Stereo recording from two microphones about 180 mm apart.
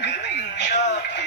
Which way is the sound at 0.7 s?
40° left (ahead or behind).